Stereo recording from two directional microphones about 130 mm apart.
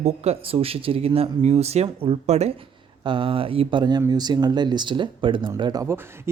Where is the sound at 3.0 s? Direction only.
40° right (ahead or behind).